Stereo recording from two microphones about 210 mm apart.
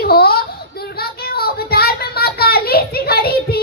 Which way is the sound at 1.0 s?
45° left (ahead or behind).